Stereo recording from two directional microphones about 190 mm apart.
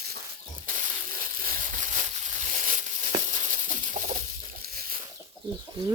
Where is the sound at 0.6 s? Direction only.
45° right (ahead or behind).